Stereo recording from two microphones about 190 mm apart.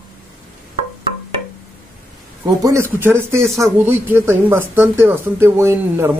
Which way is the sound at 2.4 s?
15° right (ahead or behind).